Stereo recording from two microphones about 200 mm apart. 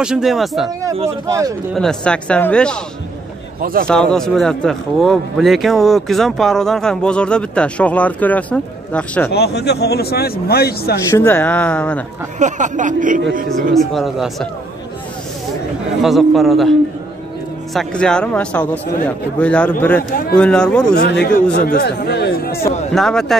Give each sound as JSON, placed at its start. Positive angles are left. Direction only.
{"t": 0.0, "sound": "speech", "side_deg": -5}
{"t": 1.0, "sound": "speech", "side_deg": -15}
{"t": 1.8, "sound": "speech", "side_deg": 5}
{"t": 3.8, "sound": "speech", "side_deg": 5}
{"t": 9.3, "sound": "speech", "side_deg": 55}
{"t": 11.1, "sound": "speech", "side_deg": 15}
{"t": 12.4, "sound": "speech", "side_deg": -35}
{"t": 13.7, "sound": "speech", "side_deg": 0}
{"t": 16.0, "sound": "speech", "side_deg": 0}
{"t": 17.7, "sound": "speech", "side_deg": 5}
{"t": 21.0, "sound": "a man's voice", "side_deg": 55}
{"t": 22.9, "sound": "speech", "side_deg": 0}